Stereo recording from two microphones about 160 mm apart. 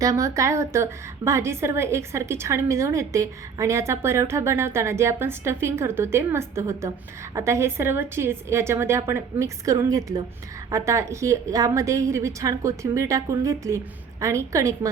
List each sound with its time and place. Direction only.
0.0 s a woman's voice: 20° right (ahead or behind)